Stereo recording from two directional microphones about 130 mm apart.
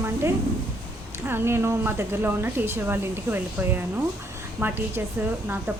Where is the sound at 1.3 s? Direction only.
20° right (ahead or behind).